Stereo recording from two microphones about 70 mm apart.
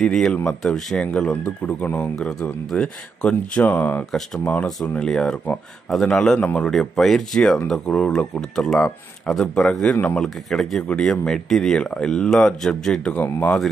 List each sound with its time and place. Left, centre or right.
0.0 s speech: centre; by 4.0 s left
4.8 s speech: centre
10.2 s speech: centre
13.1 s speech: left